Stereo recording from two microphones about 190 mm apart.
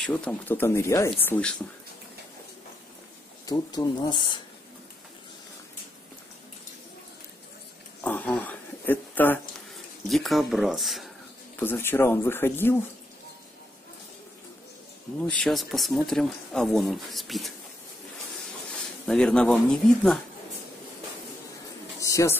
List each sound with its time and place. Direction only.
0.0 s speech: 5° left (ahead or behind)
3.4 s speech: 20° left (ahead or behind)
8.0 s a sound: 5° left (ahead or behind)
10.0 s speech: centre (ahead or behind)
11.6 s speech: 10° left (ahead or behind)
15.2 s speech: 5° left (ahead or behind)
19.0 s speech: 5° left (ahead or behind)
22.0 s a sound: 15° left (ahead or behind)